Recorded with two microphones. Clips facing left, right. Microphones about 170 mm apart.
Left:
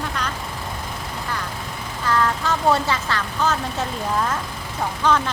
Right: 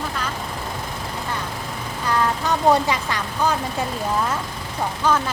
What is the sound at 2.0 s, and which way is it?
Speech, 20° right (ahead or behind).